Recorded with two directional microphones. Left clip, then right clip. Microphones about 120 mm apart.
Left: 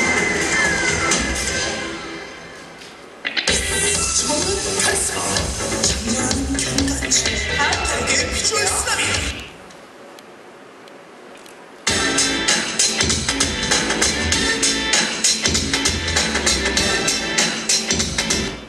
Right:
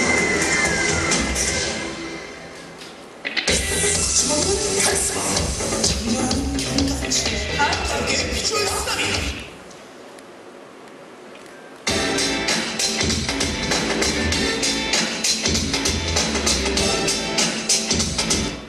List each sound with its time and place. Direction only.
0.0 s music: 25° left (ahead or behind)
3.3 s music: 25° left (ahead or behind)
11.8 s music: 20° left (ahead or behind)